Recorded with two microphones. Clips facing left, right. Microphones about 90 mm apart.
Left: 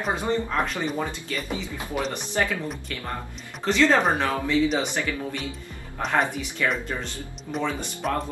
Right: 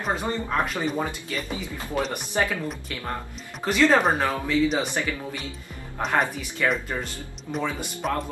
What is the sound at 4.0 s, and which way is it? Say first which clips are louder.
Speech: even; centre (ahead or behind).